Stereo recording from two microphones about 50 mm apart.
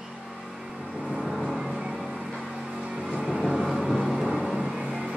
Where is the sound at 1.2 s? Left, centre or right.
Centre.